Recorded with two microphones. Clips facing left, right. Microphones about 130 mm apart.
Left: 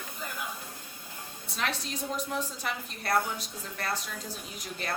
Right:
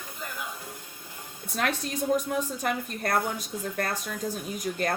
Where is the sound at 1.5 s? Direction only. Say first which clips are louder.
Right 5 dB; 50° right (ahead or behind).